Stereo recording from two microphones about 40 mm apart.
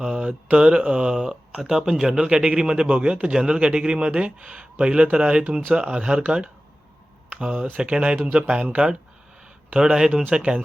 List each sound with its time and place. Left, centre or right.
0.5 s speech: right
1.7 s speech: centre
7.8 s speech: right
9.7 s speech: centre